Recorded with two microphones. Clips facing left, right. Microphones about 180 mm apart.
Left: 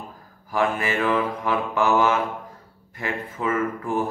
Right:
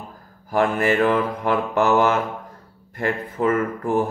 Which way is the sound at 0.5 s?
55° right (ahead or behind).